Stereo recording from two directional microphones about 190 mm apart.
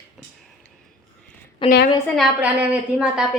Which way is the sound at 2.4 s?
5° right (ahead or behind).